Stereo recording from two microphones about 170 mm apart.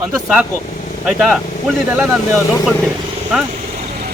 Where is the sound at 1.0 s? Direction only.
5° right (ahead or behind).